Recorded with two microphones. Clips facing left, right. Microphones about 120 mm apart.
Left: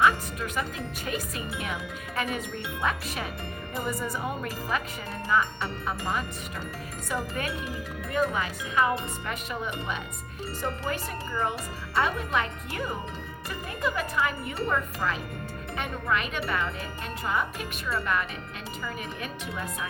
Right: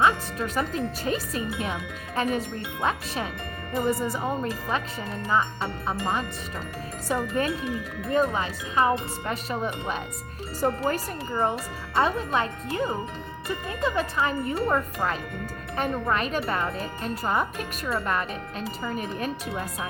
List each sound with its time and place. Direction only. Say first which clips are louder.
0.0 s speech: right 1 dB; 30° right (ahead or behind)
3.8 s speech: right 6 dB; 30° right (ahead or behind)